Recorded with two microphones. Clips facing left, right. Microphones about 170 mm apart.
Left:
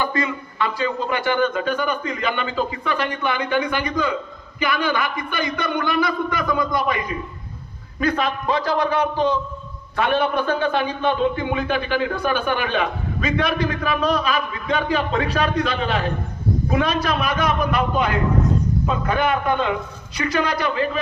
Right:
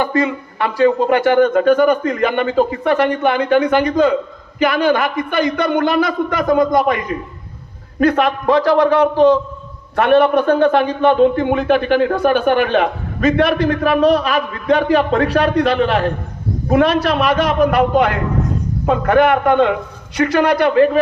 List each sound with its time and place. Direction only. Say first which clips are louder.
0.0 s a man's voice: right 6 dB; 60° right (ahead or behind)
3.8 s a man's voice: right 9 dB; 55° right (ahead or behind); by 9.4 s 75° right (ahead or behind)
9.9 s a man's voice: right 8 dB; 65° right (ahead or behind)